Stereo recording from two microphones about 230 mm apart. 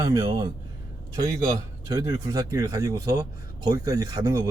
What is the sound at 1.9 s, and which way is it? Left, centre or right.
A man's voice, centre.